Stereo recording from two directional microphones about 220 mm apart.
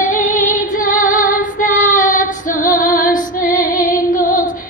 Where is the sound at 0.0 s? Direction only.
35° left (ahead or behind).